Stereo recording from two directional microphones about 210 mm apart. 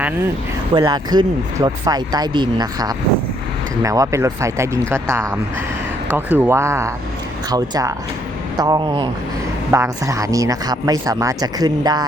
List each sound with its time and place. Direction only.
0.7 s speech: 20° right (ahead or behind)